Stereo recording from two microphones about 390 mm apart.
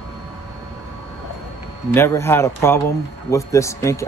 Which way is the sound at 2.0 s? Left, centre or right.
Centre.